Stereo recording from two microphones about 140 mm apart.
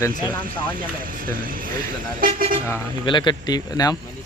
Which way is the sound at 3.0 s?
35° left (ahead or behind).